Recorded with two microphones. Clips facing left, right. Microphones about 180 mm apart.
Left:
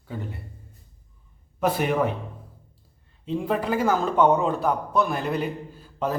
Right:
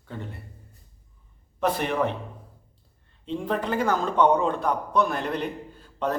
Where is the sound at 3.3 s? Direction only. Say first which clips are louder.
Left 2 dB; 5° left (ahead or behind).